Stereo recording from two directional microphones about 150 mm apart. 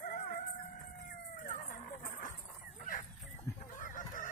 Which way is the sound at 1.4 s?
60° left (ahead or behind).